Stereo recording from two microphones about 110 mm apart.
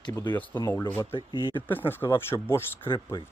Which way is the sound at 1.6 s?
20° left (ahead or behind).